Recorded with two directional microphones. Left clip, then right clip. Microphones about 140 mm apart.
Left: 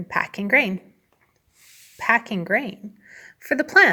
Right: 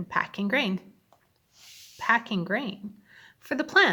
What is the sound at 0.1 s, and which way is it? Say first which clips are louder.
Speech: left 7 dB; 25° left (ahead or behind).